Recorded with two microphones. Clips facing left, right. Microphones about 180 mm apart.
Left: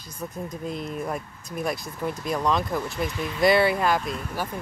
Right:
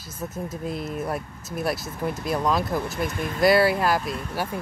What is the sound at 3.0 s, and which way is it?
Speech, 50° right (ahead or behind).